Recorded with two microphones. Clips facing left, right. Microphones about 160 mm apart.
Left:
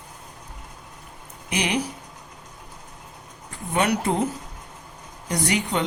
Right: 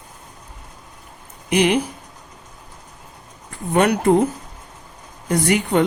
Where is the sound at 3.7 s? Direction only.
50° right (ahead or behind).